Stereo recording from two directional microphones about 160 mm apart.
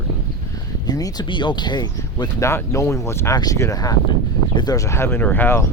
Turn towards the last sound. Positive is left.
turn(degrees=15)  # may be behind; listen again after turning